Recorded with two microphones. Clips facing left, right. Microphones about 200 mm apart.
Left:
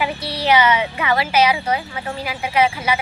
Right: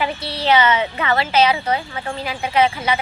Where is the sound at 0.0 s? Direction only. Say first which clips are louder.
Even; 10° left (ahead or behind).